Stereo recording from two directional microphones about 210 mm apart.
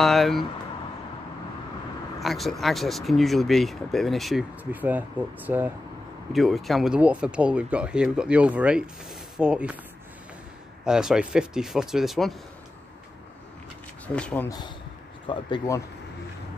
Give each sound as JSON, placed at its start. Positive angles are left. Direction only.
{"t": 0.0, "sound": "speech", "side_deg": 0}
{"t": 2.1, "sound": "speech", "side_deg": 0}
{"t": 10.9, "sound": "speech", "side_deg": -5}
{"t": 14.0, "sound": "speech", "side_deg": 5}
{"t": 15.2, "sound": "speech", "side_deg": 20}